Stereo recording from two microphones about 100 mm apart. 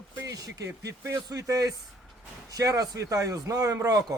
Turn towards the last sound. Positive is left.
turn(degrees=-35)  # may be behind; listen again after turning